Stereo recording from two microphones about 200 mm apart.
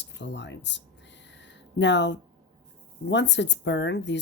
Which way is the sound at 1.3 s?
60° left (ahead or behind).